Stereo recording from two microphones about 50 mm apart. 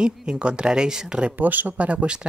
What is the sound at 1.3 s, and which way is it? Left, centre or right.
Speech, right.